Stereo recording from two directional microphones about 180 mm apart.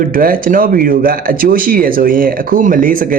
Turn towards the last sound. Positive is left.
turn(degrees=-50)  # may be behind; listen again after turning